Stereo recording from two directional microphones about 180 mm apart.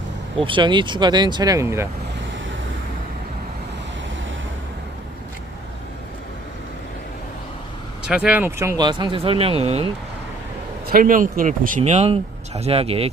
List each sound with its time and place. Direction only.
0.3 s speech: 30° right (ahead or behind)
8.0 s speech: 5° right (ahead or behind); by 9.9 s 35° right (ahead or behind)
10.8 s speech: 50° right (ahead or behind)
11.8 s speech: 35° right (ahead or behind)